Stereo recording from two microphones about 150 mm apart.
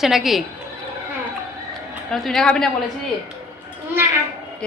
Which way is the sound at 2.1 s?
Centre (ahead or behind).